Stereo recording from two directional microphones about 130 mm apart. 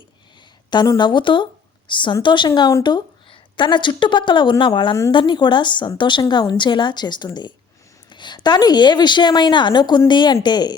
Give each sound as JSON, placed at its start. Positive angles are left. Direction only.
{"t": 0.7, "sound": "a woman's voice", "side_deg": 35}